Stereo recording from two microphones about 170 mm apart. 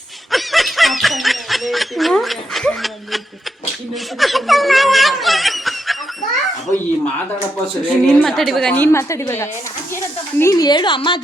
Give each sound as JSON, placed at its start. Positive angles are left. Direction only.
{"t": 0.3, "sound": "snicker", "side_deg": 0}
{"t": 4.2, "sound": "snicker", "side_deg": 0}
{"t": 8.1, "sound": "a woman's voice", "side_deg": 0}